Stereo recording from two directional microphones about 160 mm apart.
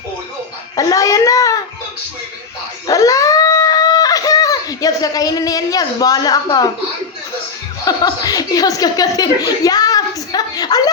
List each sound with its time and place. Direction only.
0.8 s a sound: 20° left (ahead or behind)
2.8 s dog: 20° left (ahead or behind)
7.9 s speech: 25° left (ahead or behind)